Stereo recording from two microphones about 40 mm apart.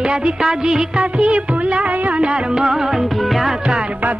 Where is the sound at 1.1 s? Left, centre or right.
Right.